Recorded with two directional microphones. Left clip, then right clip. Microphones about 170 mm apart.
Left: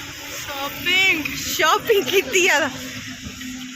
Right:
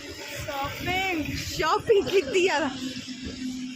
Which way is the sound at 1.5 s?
5° left (ahead or behind).